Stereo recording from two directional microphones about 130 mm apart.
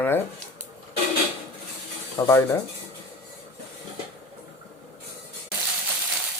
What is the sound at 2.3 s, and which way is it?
Speech, 20° left (ahead or behind).